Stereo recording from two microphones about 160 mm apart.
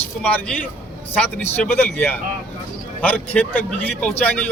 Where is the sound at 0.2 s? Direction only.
10° left (ahead or behind).